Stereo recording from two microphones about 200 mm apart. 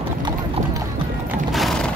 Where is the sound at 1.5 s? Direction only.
Centre (ahead or behind).